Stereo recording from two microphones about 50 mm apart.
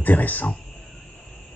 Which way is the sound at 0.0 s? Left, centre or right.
Left.